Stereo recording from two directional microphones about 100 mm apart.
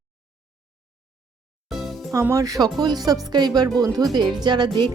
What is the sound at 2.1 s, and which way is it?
Speech, 30° right (ahead or behind).